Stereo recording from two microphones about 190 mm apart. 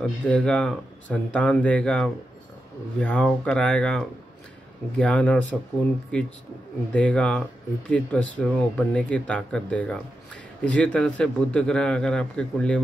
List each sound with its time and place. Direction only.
0.0 s a man's voice: 5° left (ahead or behind)